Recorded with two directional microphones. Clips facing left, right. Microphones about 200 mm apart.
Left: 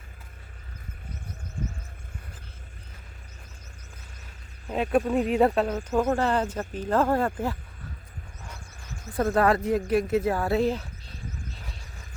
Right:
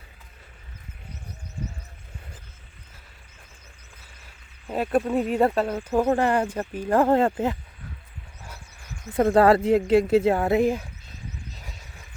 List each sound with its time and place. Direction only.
4.7 s speech: centre (ahead or behind)
5.9 s speech: 15° right (ahead or behind)
9.1 s speech: 25° right (ahead or behind)